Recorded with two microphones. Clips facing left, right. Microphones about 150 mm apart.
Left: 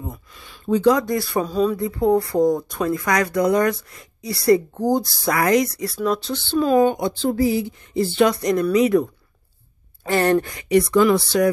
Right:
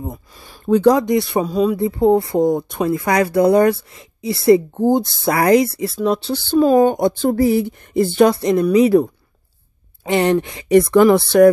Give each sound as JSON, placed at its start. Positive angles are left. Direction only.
{"t": 0.9, "sound": "speech", "side_deg": -20}
{"t": 1.4, "sound": "speech", "side_deg": -10}
{"t": 1.8, "sound": "speech", "side_deg": -25}
{"t": 6.5, "sound": "speech", "side_deg": -45}
{"t": 8.3, "sound": "speech", "side_deg": -30}
{"t": 10.0, "sound": "speech", "side_deg": -20}
{"t": 10.7, "sound": "speech", "side_deg": -55}